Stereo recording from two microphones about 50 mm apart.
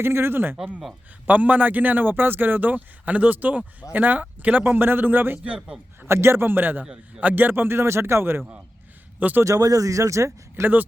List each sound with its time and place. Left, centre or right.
0.0 s speech: right
1.3 s a man's voice: right
6.1 s speech: right
9.1 s speech: right
9.4 s speech: right